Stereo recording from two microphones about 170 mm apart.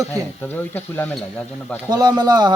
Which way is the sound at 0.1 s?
10° left (ahead or behind).